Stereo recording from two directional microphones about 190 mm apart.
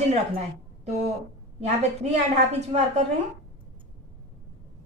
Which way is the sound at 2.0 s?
35° right (ahead or behind).